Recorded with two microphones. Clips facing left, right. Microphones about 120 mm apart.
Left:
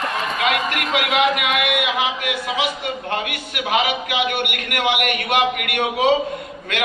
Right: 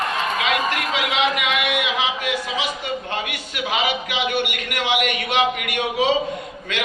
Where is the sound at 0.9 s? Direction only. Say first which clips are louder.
Left 6 dB; 55° left (ahead or behind).